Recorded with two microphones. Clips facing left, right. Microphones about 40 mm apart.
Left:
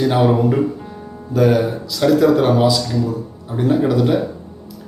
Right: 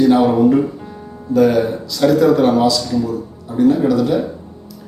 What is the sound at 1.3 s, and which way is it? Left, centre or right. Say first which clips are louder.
Speech: right 2 dB; centre.